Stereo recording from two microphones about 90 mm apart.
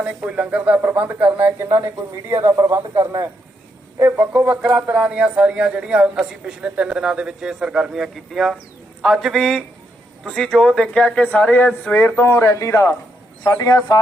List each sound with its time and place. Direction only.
0.0 s speech: 15° right (ahead or behind)
2.3 s speech: 30° right (ahead or behind)
4.0 s a man's voice: 20° right (ahead or behind); by 14.0 s 45° left (ahead or behind)